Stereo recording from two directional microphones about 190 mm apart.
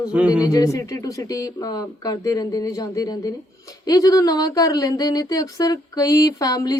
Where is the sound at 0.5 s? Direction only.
15° left (ahead or behind).